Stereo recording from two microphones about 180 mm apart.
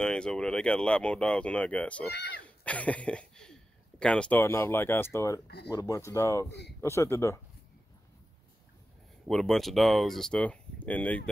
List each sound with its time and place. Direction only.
0.0 s speech: 5° left (ahead or behind)
2.0 s speech: 65° left (ahead or behind)
2.4 s a sound: 5° left (ahead or behind)
4.0 s speech: 5° left (ahead or behind)
9.3 s speech: centre (ahead or behind)